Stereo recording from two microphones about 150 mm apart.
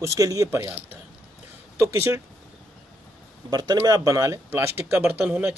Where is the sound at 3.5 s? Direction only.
25° right (ahead or behind); by 5.5 s 10° right (ahead or behind).